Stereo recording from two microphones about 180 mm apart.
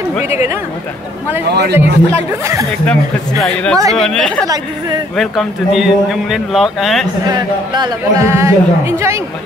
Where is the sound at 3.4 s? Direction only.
5° left (ahead or behind).